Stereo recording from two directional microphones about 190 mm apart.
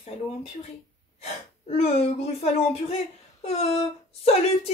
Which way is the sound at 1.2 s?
35° left (ahead or behind).